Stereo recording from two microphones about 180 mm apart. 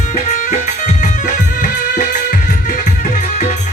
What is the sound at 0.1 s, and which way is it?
Music, 40° left (ahead or behind).